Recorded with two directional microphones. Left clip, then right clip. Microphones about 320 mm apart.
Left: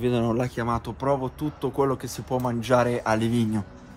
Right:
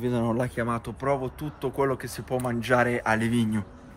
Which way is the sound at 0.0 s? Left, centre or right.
Centre.